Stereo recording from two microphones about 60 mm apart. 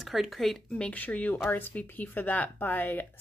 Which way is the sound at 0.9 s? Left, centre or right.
Left.